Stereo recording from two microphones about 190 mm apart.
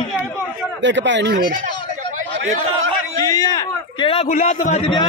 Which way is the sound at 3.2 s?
20° left (ahead or behind).